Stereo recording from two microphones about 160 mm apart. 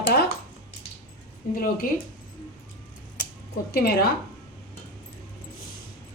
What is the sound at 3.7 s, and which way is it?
Speech, 75° left (ahead or behind).